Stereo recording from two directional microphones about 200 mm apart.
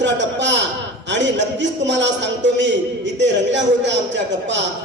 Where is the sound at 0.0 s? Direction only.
60° right (ahead or behind).